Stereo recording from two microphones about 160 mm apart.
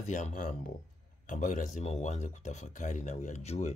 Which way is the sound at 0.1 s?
55° left (ahead or behind).